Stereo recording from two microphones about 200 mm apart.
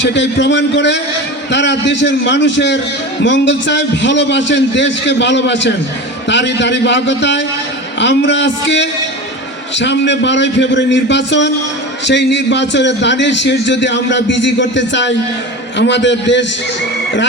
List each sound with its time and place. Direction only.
0.0 s a man's voice: 60° left (ahead or behind)